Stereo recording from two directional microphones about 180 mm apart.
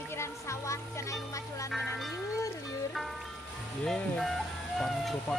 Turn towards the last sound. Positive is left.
turn(degrees=0)  # may be behind; listen again after turning